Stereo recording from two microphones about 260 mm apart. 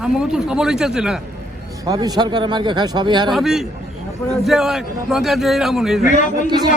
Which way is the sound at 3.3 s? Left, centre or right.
Centre.